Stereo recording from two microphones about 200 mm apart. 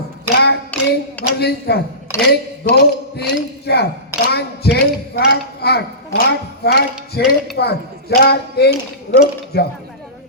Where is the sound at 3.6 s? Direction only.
55° left (ahead or behind).